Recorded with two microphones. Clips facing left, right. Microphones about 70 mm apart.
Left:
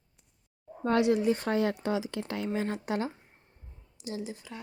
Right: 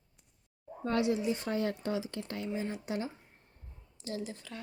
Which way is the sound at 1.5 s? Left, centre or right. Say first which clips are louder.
Left 5 dB; left.